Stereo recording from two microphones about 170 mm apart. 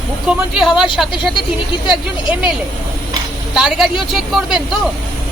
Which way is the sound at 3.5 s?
5° right (ahead or behind).